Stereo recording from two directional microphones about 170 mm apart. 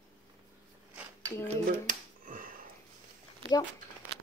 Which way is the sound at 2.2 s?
55° right (ahead or behind).